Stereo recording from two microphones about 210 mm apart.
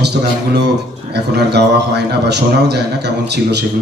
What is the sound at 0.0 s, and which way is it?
A man's voice, 55° right (ahead or behind).